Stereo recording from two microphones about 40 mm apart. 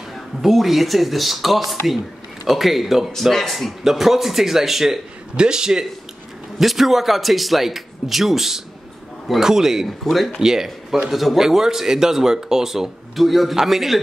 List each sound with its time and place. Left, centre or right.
0.4 s speech: centre
3.8 s speech: centre
5.3 s speech: right
6.6 s speech: centre
9.8 s speech: centre
10.4 s speech: centre